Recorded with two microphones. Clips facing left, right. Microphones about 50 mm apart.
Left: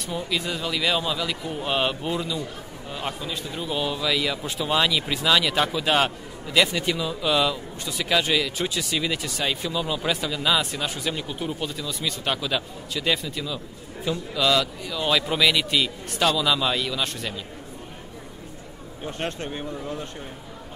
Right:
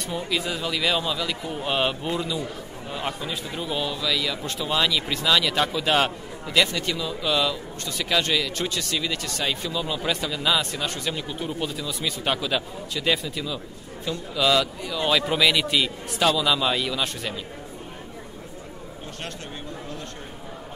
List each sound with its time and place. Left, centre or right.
0.0 s speech: centre
3.8 s a man's voice: centre
19.0 s speech: left